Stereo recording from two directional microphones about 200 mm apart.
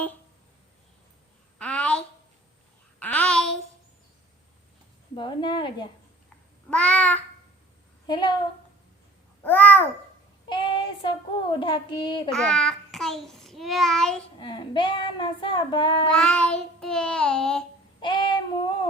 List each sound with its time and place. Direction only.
1.5 s a sound: 5° left (ahead or behind)
3.0 s a sound: 5° left (ahead or behind)
5.1 s child singing: 25° left (ahead or behind)
6.7 s babbling: 5° left (ahead or behind)
8.0 s a woman's voice: 20° left (ahead or behind)
9.4 s babbling: 10° left (ahead or behind)
10.5 s child singing: 25° left (ahead or behind)
12.3 s child singing: 5° left (ahead or behind)
14.3 s child singing: 25° left (ahead or behind)
16.1 s child singing: 5° left (ahead or behind)
18.0 s child singing: 25° left (ahead or behind)